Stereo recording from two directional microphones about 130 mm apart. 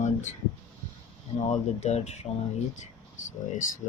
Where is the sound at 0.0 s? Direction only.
70° left (ahead or behind).